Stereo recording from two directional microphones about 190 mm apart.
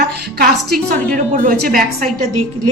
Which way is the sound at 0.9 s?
45° right (ahead or behind).